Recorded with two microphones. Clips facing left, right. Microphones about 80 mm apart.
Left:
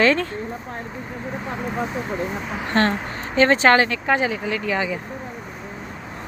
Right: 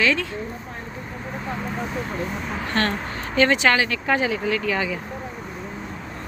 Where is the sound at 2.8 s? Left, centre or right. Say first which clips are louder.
Left 4 dB; left.